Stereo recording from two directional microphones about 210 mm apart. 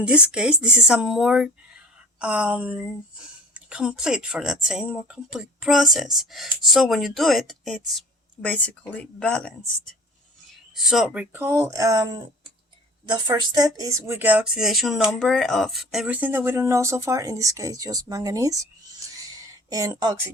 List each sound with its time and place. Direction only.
0.0 s speech: 5° right (ahead or behind)